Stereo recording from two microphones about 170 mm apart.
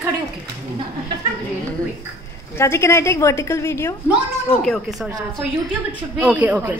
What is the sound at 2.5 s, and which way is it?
A woman's voice, 15° left (ahead or behind).